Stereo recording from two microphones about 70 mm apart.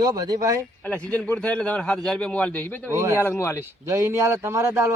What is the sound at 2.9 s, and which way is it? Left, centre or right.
Speech, right.